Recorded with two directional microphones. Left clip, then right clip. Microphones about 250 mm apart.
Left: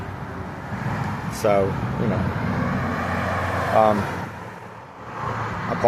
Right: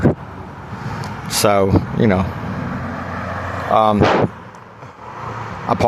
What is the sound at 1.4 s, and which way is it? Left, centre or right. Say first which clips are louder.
Speech: right 4 dB; right.